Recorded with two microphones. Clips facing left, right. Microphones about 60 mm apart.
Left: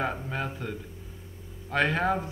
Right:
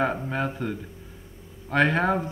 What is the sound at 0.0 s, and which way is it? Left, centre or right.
Speech, centre.